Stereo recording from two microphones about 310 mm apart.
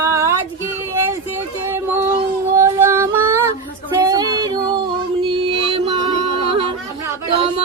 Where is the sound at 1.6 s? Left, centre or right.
Centre.